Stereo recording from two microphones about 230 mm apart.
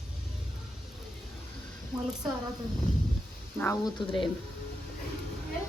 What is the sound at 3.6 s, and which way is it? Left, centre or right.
Speech, centre.